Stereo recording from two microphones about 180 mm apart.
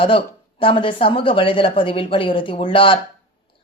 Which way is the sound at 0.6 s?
30° left (ahead or behind).